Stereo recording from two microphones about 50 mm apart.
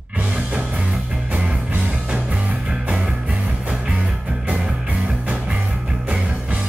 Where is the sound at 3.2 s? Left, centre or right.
Right.